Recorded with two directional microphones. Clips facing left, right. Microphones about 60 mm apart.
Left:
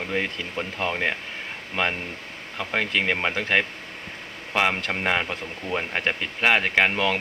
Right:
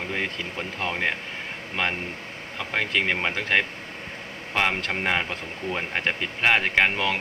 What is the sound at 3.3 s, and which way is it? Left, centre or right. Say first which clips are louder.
Speech: left 1 dB; centre.